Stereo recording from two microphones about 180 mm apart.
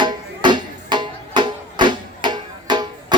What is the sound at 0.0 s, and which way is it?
Music, 25° right (ahead or behind).